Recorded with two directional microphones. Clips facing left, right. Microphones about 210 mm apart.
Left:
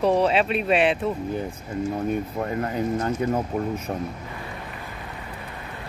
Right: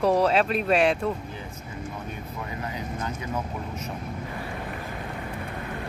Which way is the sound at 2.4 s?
50° left (ahead or behind).